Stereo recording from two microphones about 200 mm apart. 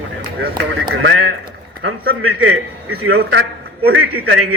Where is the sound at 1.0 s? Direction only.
75° right (ahead or behind).